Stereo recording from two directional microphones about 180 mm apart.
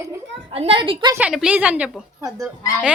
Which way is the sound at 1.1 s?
5° right (ahead or behind).